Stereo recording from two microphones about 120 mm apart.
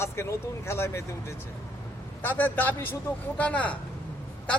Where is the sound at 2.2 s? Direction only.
15° left (ahead or behind).